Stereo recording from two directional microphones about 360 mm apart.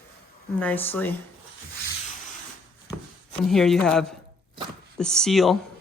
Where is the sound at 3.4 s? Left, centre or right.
Centre.